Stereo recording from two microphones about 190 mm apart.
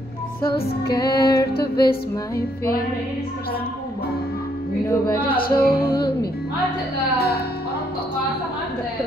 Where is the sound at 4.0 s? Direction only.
55° left (ahead or behind).